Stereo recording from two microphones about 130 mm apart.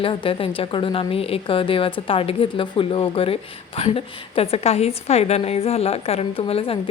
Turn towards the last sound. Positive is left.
turn(degrees=45)  # may be behind; listen again after turning